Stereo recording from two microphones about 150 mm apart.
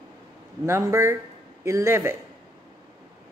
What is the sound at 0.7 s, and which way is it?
A man's voice, 20° right (ahead or behind).